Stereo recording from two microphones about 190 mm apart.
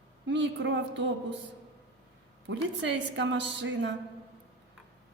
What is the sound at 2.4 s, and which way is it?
A woman's voice, 70° right (ahead or behind).